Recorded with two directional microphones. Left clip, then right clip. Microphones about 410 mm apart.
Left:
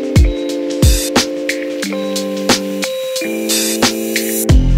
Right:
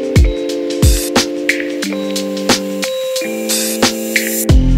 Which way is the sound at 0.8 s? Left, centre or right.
Centre.